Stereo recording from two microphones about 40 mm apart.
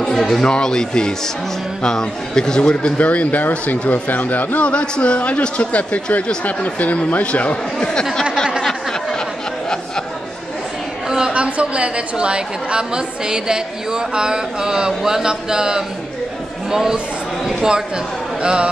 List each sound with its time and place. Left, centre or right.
0.2 s a man's voice: centre
2.7 s speech: left
4.6 s a man's voice: left
7.9 s a man's voice: centre
11.1 s a sound: centre
11.4 s a woman's voice: right; by 17.0 s centre
18.4 s speech: right